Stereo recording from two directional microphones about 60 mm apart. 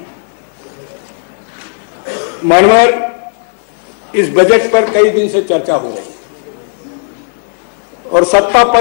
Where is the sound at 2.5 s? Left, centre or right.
Centre.